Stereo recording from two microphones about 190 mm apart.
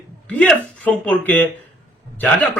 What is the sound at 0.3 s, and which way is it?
A man's voice, 5° left (ahead or behind).